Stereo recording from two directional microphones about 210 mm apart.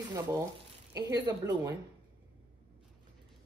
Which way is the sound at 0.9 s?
20° right (ahead or behind).